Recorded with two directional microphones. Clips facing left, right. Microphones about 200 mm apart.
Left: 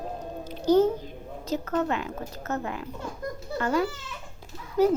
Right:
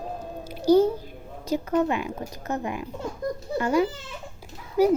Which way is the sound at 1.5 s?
10° right (ahead or behind).